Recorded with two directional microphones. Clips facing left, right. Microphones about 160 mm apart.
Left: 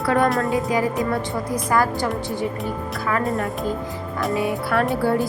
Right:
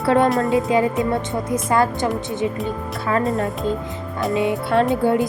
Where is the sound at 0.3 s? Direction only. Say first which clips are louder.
Right 2 dB; centre (ahead or behind).